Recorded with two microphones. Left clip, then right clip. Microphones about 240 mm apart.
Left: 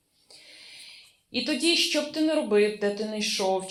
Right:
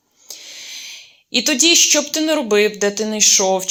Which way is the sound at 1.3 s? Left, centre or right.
Right.